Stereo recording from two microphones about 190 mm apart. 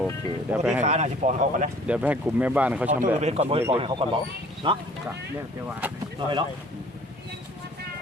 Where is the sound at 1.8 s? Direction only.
5° right (ahead or behind).